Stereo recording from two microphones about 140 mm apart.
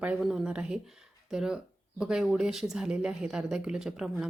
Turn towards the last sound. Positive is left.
turn(degrees=-5)  # may be behind; listen again after turning